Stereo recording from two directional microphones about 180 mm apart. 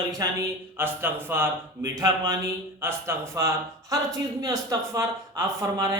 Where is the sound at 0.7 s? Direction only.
10° right (ahead or behind).